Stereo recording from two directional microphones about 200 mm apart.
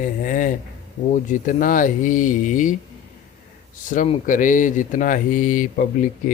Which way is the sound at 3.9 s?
40° left (ahead or behind).